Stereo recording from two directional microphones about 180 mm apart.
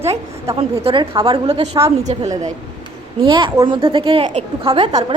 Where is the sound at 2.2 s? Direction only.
20° right (ahead or behind); by 4.4 s 35° right (ahead or behind).